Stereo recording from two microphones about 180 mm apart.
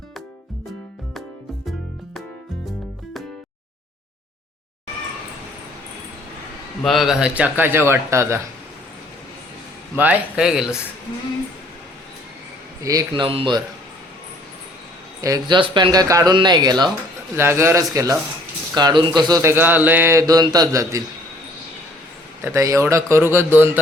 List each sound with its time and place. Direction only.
2.6 s music: centre (ahead or behind)
6.8 s speech: centre (ahead or behind)
10.0 s speech: 5° right (ahead or behind)
12.8 s speech: 20° right (ahead or behind)
15.2 s speech: 20° right (ahead or behind)
19.3 s speech: 15° right (ahead or behind)
22.4 s speech: 15° right (ahead or behind)